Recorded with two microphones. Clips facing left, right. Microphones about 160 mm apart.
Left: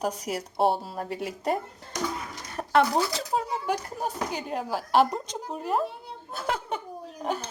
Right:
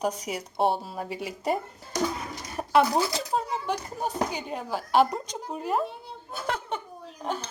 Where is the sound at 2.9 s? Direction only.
Centre (ahead or behind).